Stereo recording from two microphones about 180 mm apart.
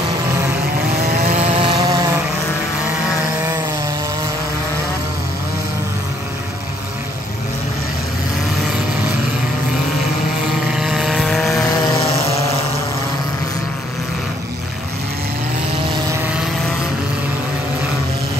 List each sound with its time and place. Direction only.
1.2 s vehicle: 35° right (ahead or behind)
10.7 s vehicle: 5° right (ahead or behind)
16.1 s vehicle: 10° right (ahead or behind)